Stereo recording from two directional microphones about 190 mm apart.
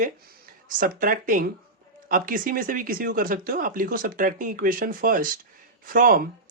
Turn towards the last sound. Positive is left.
turn(degrees=-45)  # may be behind; listen again after turning